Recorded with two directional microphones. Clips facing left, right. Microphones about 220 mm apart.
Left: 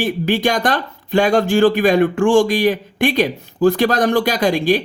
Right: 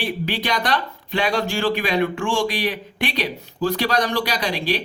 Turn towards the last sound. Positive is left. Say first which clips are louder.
# left 8 dB
turn(degrees=50)  # may be behind; listen again after turning